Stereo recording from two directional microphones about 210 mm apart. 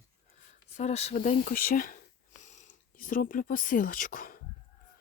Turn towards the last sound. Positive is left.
turn(degrees=40)  # may be behind; listen again after turning